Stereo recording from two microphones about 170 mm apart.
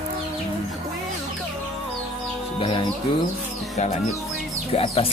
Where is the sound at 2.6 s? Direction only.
30° left (ahead or behind).